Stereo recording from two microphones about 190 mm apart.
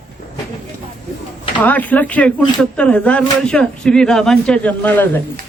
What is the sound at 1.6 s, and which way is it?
Speech, 10° left (ahead or behind).